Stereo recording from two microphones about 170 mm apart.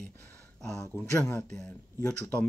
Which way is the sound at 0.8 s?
15° left (ahead or behind).